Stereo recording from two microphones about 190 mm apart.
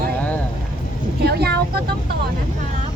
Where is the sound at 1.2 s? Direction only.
55° right (ahead or behind).